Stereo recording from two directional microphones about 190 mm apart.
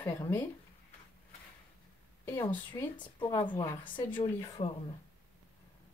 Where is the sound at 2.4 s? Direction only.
25° left (ahead or behind).